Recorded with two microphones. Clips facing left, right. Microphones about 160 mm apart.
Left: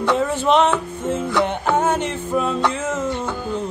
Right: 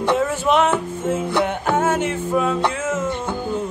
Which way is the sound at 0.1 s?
5° right (ahead or behind).